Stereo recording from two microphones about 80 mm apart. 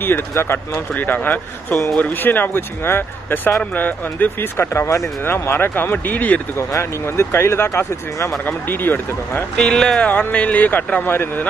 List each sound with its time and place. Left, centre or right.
0.0 s speech: left
6.8 s speech: left
9.6 s speech: centre
10.0 s speech: centre